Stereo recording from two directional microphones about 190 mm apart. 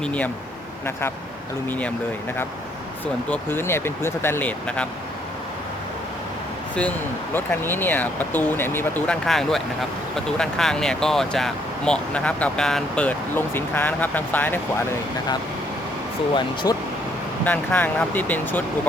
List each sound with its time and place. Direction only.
0.0 s speech: 5° left (ahead or behind)
1.6 s speech: 10° left (ahead or behind)
3.2 s speech: 10° left (ahead or behind)
7.3 s speech: 10° left (ahead or behind)
16.7 s speech: 20° left (ahead or behind)
17.4 s speech: 10° left (ahead or behind)